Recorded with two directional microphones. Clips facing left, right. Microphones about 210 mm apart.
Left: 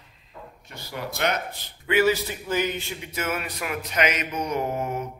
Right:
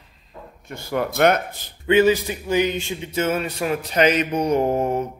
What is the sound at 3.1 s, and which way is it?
Mantra, 30° right (ahead or behind).